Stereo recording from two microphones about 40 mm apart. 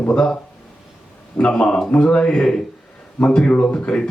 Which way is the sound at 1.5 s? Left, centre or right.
Centre.